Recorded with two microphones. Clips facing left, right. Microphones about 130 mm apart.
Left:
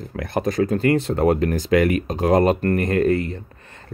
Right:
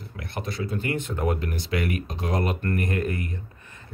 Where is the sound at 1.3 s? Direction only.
90° left.